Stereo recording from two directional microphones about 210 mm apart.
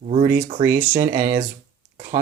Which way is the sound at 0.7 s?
40° right (ahead or behind).